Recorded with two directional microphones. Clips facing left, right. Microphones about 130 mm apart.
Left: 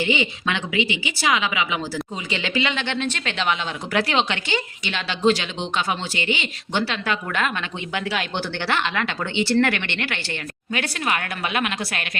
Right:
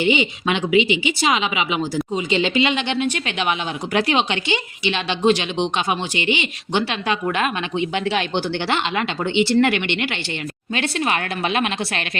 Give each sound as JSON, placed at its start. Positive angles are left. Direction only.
{"t": 0.0, "sound": "a woman's voice", "side_deg": -20}